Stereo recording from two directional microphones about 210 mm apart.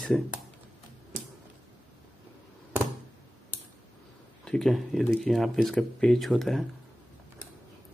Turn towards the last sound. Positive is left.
turn(degrees=0)  # may be behind; listen again after turning